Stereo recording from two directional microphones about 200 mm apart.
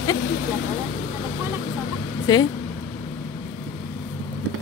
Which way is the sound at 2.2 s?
20° left (ahead or behind).